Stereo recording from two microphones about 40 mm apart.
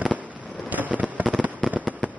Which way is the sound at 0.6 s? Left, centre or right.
Right.